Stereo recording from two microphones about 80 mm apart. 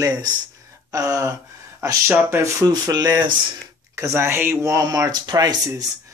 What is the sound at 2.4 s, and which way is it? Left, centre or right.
Speech, right.